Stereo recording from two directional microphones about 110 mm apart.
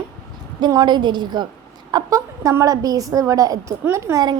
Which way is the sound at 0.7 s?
40° right (ahead or behind).